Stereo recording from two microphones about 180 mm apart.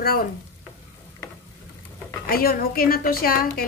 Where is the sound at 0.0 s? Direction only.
55° left (ahead or behind).